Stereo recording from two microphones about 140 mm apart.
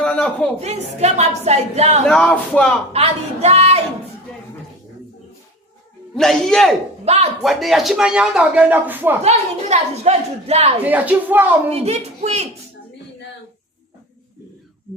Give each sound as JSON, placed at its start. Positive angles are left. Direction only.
{"t": 0.0, "sound": "a sound", "side_deg": 10}
{"t": 0.6, "sound": "a woman's voice", "side_deg": -50}
{"t": 2.0, "sound": "a man's voice", "side_deg": 5}
{"t": 2.9, "sound": "a woman's voice", "side_deg": -45}
{"t": 6.1, "sound": "a man's voice", "side_deg": 5}
{"t": 7.0, "sound": "speech", "side_deg": -50}
{"t": 7.4, "sound": "a man's voice", "side_deg": 0}
{"t": 9.2, "sound": "a woman's voice", "side_deg": -50}
{"t": 10.8, "sound": "speech", "side_deg": -10}
{"t": 11.7, "sound": "a woman's voice", "side_deg": -50}